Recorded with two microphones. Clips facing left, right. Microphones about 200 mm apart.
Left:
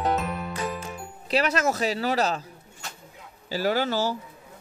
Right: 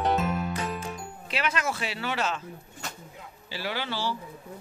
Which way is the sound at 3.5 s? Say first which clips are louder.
Left 8 dB; 40° left (ahead or behind).